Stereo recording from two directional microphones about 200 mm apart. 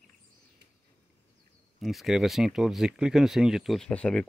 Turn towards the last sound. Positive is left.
turn(degrees=5)  # may be behind; listen again after turning